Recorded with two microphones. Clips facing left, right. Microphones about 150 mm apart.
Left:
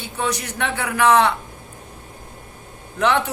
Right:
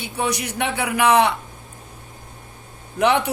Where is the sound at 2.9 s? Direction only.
15° right (ahead or behind).